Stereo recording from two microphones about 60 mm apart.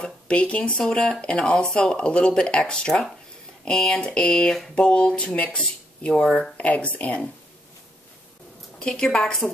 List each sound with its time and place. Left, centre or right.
0.0 s speech: centre
6.5 s speech: left
8.7 s speech: centre